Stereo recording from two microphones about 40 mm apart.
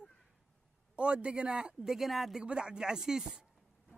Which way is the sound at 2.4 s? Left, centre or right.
Right.